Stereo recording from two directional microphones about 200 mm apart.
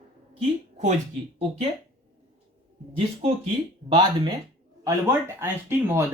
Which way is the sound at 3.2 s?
30° right (ahead or behind).